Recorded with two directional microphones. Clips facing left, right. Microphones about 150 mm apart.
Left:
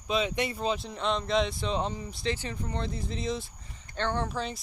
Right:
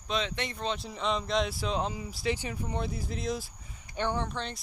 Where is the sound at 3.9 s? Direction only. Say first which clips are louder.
Even; 10° right (ahead or behind).